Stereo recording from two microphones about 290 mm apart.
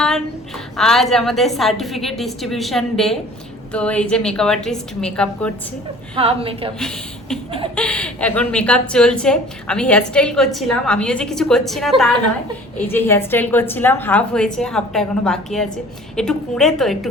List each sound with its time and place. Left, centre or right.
0.0 s a woman's voice: centre
6.1 s a woman's voice: centre
6.7 s a woman's voice: centre